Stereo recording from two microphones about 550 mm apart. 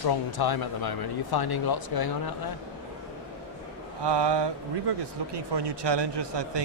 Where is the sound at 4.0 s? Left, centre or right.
Right.